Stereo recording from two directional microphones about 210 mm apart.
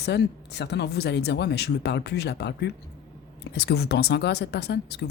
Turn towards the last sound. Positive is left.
turn(degrees=50)  # may be behind; listen again after turning